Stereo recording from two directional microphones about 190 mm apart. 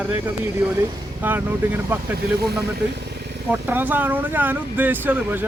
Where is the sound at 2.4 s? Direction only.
55° right (ahead or behind).